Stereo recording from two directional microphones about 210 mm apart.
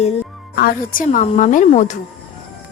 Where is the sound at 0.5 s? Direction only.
45° left (ahead or behind).